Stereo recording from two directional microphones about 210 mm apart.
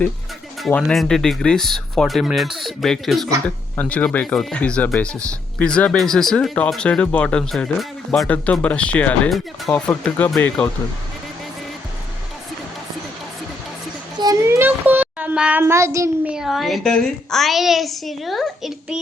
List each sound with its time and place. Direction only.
0.6 s speech: 5° left (ahead or behind)
14.2 s child singing: 15° right (ahead or behind)
16.3 s speech: centre (ahead or behind)